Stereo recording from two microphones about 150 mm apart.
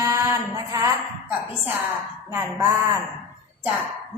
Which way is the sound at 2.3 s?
20° right (ahead or behind).